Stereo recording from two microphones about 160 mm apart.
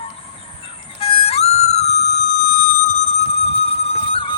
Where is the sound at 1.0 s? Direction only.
40° left (ahead or behind).